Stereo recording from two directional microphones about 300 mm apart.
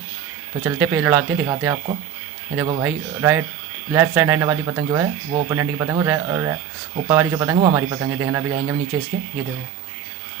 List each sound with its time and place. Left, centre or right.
0.6 s speech: centre